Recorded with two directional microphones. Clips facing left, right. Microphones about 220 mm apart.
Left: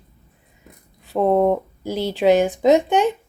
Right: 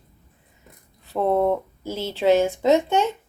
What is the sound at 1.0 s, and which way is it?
A woman's voice, 15° left (ahead or behind).